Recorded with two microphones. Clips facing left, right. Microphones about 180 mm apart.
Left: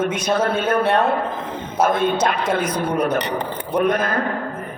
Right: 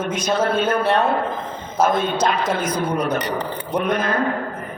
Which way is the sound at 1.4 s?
65° left (ahead or behind).